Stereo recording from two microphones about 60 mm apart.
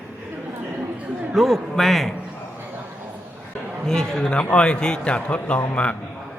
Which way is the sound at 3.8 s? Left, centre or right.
Centre.